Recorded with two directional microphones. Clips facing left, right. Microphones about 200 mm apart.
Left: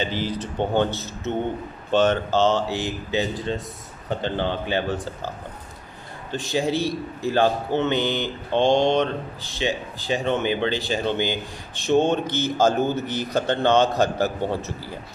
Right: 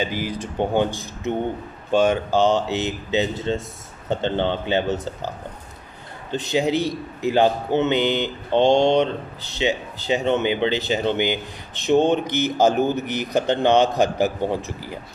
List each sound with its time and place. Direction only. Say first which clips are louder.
0.0 s a man's voice: right 1 dB; 10° right (ahead or behind)
6.3 s a man's voice: right 3 dB; 20° right (ahead or behind)